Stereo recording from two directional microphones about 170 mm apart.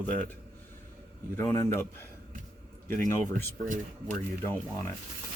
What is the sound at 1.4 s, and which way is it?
Speech, 15° left (ahead or behind).